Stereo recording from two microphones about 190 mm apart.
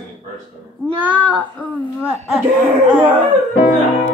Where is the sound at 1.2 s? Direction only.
5° left (ahead or behind).